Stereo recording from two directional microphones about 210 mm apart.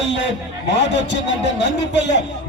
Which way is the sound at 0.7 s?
55° left (ahead or behind).